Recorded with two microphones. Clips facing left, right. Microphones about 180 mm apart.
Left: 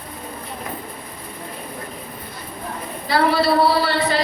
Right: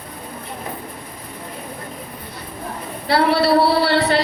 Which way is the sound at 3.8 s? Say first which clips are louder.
Right 3 dB; 65° right (ahead or behind).